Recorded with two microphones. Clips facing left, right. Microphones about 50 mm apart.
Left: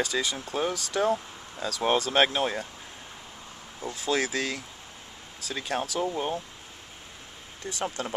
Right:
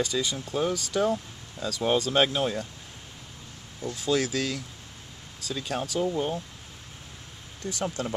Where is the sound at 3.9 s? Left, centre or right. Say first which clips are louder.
Right 1 dB; left.